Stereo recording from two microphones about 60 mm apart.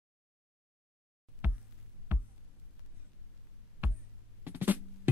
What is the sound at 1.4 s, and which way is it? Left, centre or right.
Music, right.